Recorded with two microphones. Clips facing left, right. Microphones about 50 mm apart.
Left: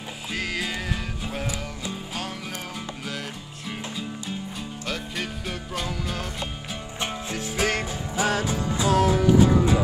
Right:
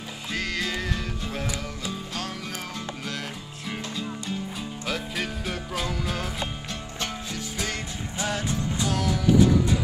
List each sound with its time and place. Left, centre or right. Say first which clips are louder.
0.3 s music: even; centre
3.6 s music: right 1 dB; centre
7.5 s music: left 8 dB; left
8.3 s music: left 3 dB; left
8.8 s music: left 6 dB; left